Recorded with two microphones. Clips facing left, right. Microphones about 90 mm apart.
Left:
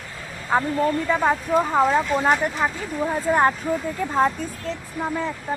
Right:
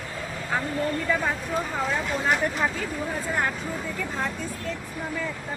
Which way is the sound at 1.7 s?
45° left (ahead or behind).